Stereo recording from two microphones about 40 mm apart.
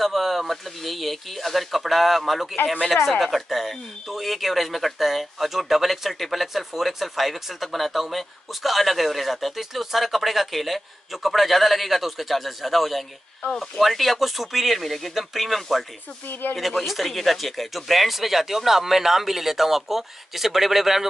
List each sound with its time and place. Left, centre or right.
0.0 s speech: centre
16.3 s speech: left
16.5 s speech: centre